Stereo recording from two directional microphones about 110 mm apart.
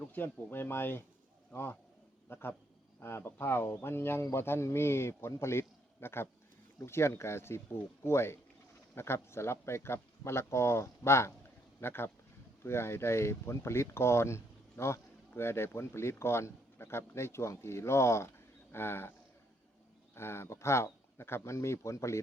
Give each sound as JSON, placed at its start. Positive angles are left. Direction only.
{"t": 0.1, "sound": "speech", "side_deg": 20}
{"t": 2.3, "sound": "speech", "side_deg": 20}
{"t": 20.1, "sound": "speech", "side_deg": 25}